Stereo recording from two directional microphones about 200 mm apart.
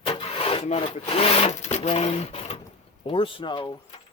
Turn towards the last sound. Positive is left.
turn(degrees=25)  # may be behind; listen again after turning